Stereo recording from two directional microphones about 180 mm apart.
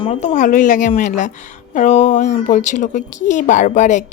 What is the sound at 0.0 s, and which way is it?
Speech, 35° left (ahead or behind).